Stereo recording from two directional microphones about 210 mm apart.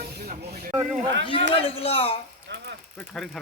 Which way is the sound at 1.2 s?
25° left (ahead or behind).